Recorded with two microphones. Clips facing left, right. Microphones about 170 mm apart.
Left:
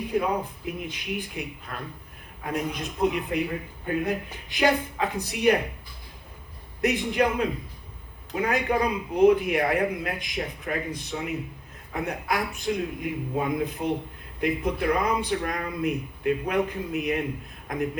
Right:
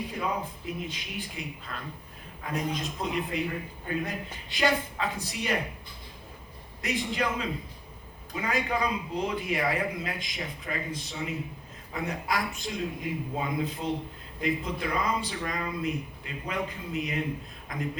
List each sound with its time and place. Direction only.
0.1 s a man's voice: 60° left (ahead or behind)
6.8 s a man's voice: 60° left (ahead or behind)